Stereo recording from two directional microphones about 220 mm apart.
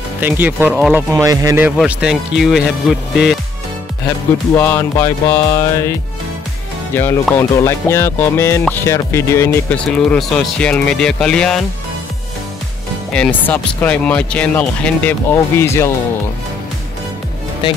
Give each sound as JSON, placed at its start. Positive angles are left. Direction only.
{"t": 0.2, "sound": "speech", "side_deg": -10}
{"t": 1.2, "sound": "speech", "side_deg": -15}
{"t": 1.8, "sound": "speech", "side_deg": -5}
{"t": 4.6, "sound": "speech", "side_deg": 15}
{"t": 7.0, "sound": "speech", "side_deg": 10}
{"t": 13.1, "sound": "speech", "side_deg": 5}